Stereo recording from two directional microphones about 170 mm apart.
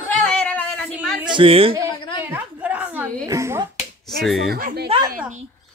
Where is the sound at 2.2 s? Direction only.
10° right (ahead or behind).